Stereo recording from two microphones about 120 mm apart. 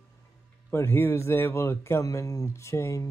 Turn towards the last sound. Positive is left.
turn(degrees=25)  # may be behind; listen again after turning